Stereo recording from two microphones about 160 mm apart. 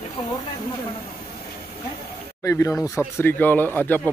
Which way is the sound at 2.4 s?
20° left (ahead or behind).